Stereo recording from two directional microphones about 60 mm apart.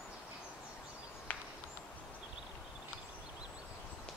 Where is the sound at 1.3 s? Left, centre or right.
Left.